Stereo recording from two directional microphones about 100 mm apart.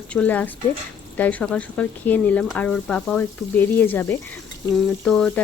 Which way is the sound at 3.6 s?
20° left (ahead or behind).